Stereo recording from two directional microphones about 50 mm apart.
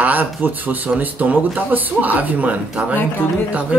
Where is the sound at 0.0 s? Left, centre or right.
Right.